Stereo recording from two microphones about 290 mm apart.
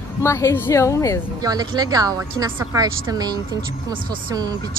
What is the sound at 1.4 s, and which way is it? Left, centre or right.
Speech, centre.